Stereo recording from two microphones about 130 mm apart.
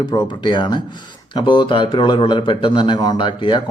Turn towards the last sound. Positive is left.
turn(degrees=40)  # may be behind; listen again after turning